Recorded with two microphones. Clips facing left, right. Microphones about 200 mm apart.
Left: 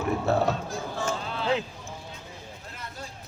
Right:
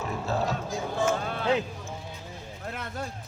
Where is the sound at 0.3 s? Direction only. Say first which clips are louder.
Left 2 dB; 60° left (ahead or behind).